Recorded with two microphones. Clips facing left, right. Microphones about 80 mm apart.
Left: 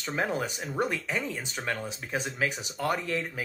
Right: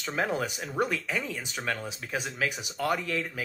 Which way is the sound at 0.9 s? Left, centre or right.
Centre.